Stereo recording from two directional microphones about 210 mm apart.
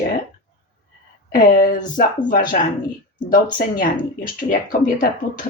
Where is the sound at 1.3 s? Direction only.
40° left (ahead or behind).